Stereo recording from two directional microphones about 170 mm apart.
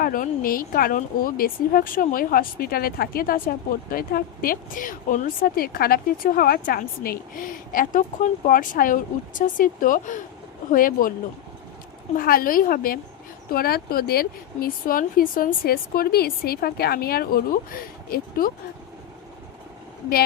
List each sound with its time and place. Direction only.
0.0 s speech: 55° left (ahead or behind)
12.1 s speech: 60° left (ahead or behind)